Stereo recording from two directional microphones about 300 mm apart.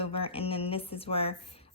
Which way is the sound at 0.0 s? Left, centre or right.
Centre.